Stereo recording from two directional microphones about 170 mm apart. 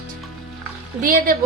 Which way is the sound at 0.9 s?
55° right (ahead or behind).